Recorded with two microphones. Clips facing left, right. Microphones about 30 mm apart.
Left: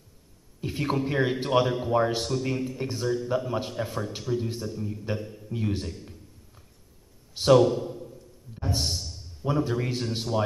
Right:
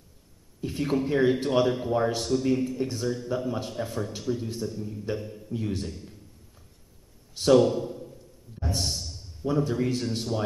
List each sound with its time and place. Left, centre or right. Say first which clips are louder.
0.6 s a man's voice: right 1 dB; centre
5.5 s a sound: left 1 dB; centre
7.3 s a man's voice: left 1 dB; centre
7.6 s a man's voice: even; centre